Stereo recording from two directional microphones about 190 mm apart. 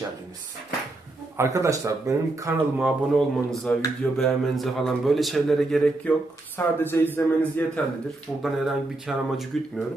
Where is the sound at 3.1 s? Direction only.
5° left (ahead or behind).